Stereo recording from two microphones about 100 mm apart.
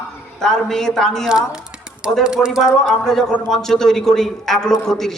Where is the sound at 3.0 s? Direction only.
5° left (ahead or behind).